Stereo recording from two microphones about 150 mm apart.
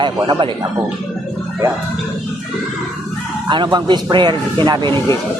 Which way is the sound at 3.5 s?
30° right (ahead or behind).